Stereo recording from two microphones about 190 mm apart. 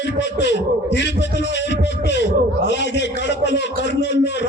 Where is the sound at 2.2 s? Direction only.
65° left (ahead or behind).